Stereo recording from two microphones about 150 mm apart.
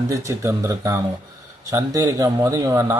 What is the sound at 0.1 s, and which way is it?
Speech, 20° right (ahead or behind).